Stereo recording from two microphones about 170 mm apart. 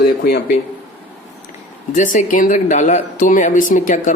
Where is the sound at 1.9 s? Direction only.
50° left (ahead or behind).